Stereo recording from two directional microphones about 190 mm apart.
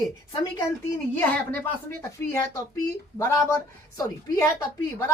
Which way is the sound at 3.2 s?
10° left (ahead or behind).